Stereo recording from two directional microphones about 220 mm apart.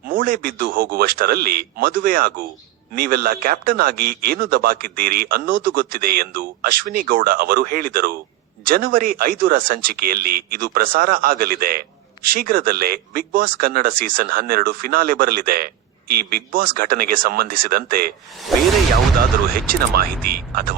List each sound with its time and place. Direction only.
0.1 s a man's voice: 40° right (ahead or behind)
18.5 s speech: centre (ahead or behind)
19.5 s a man's voice: 40° right (ahead or behind)